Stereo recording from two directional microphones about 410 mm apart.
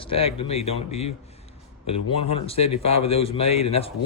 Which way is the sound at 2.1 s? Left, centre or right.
Centre.